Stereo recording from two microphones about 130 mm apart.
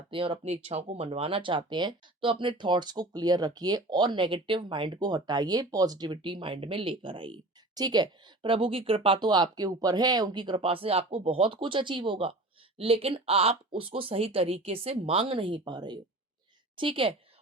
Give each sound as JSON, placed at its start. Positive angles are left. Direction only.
{"t": 0.1, "sound": "a woman's voice", "side_deg": -45}